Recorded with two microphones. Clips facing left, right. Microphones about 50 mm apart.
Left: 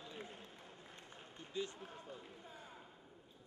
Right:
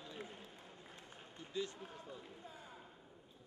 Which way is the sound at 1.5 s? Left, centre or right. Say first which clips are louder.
Right 1 dB; left.